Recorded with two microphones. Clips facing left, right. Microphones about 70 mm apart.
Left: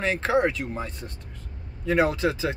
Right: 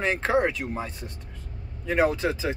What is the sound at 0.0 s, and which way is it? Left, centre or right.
Speech, centre.